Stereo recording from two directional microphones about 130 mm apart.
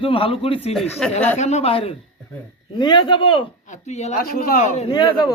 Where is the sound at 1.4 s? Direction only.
60° left (ahead or behind).